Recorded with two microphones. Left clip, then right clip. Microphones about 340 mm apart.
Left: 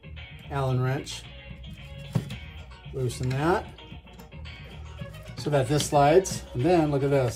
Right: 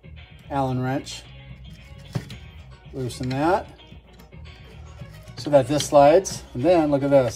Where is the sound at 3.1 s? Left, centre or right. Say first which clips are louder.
Right 5 dB; centre.